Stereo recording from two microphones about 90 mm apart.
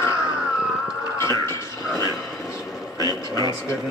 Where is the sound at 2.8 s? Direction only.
40° left (ahead or behind).